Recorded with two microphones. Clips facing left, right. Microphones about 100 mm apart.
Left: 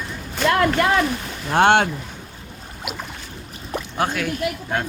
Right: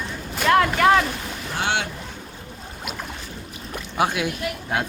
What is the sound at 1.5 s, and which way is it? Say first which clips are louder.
Speech: left 10 dB; 55° left (ahead or behind).